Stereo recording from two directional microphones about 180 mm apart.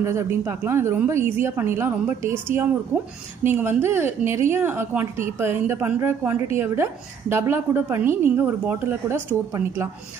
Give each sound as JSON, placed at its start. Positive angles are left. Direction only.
{"t": 0.0, "sound": "a woman's voice", "side_deg": -15}